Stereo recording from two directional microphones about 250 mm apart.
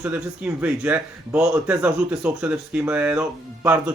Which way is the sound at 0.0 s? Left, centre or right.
Centre.